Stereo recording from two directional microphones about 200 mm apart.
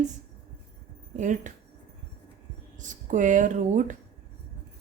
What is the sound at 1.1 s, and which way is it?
Speech, 40° right (ahead or behind).